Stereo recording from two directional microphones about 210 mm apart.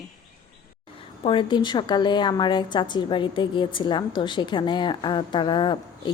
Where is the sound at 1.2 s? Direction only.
25° left (ahead or behind).